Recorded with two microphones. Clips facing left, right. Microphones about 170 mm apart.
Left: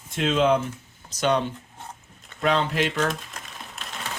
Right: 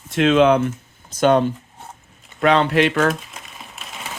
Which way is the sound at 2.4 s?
75° right (ahead or behind).